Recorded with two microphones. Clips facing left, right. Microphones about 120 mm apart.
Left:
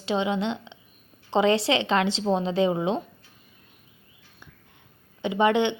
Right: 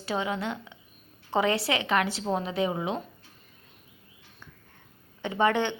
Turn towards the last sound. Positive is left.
turn(degrees=20)  # may be behind; listen again after turning